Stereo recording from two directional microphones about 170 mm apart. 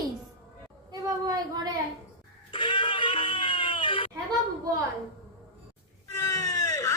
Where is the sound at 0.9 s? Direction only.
20° right (ahead or behind).